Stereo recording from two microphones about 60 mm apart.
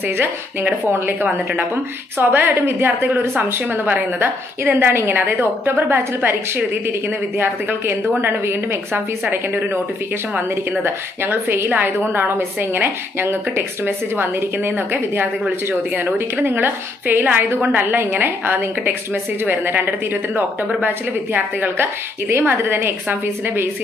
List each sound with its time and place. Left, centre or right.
0.8 s a woman's voice: right
10.8 s a woman's voice: right